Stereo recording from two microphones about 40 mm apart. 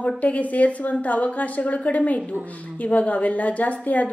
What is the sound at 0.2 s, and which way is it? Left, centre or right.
A woman's voice, left.